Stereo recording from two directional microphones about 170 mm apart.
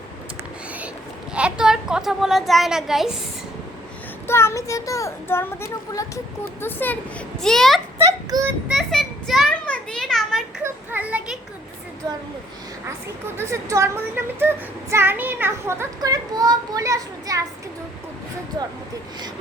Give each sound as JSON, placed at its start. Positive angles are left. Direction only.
{"t": 1.3, "sound": "a child's voice", "side_deg": -5}
{"t": 4.3, "sound": "a child's voice", "side_deg": 15}
{"t": 7.9, "sound": "a sound", "side_deg": -20}
{"t": 8.6, "sound": "a sound", "side_deg": 0}
{"t": 10.6, "sound": "children playing", "side_deg": -10}
{"t": 12.0, "sound": "speech", "side_deg": -20}
{"t": 13.3, "sound": "a child's voice", "side_deg": -15}